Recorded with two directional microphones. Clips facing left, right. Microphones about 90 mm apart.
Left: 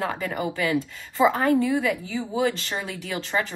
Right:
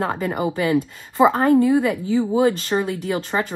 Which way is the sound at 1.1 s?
45° right (ahead or behind).